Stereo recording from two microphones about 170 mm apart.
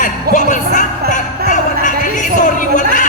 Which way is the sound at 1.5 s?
50° left (ahead or behind).